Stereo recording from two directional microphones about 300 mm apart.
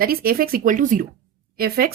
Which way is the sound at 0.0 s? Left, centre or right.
Right.